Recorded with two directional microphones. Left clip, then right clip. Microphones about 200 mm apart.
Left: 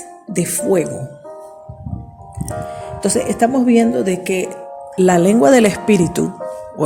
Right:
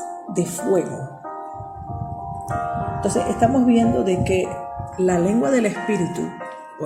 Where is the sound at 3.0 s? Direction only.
50° left (ahead or behind).